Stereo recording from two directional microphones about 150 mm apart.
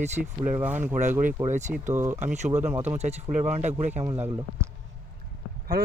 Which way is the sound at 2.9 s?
50° right (ahead or behind).